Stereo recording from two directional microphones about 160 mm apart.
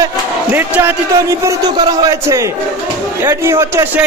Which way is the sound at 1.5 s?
25° right (ahead or behind).